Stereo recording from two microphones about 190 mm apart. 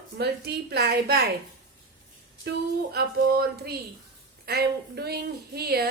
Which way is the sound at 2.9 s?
55° right (ahead or behind).